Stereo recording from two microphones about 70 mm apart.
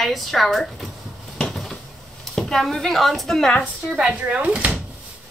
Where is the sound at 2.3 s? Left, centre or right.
Centre.